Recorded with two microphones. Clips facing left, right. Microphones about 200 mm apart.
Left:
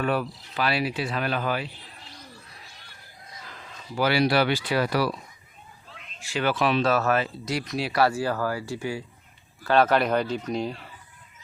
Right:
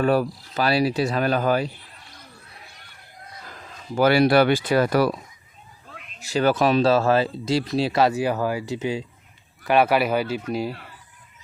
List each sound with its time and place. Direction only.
0.0 s speech: 40° right (ahead or behind)
3.9 s speech: 50° right (ahead or behind)
6.9 s speech: 30° right (ahead or behind); by 10.8 s 5° right (ahead or behind)